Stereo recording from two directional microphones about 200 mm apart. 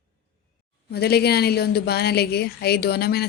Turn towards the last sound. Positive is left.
turn(degrees=50)  # may be behind; listen again after turning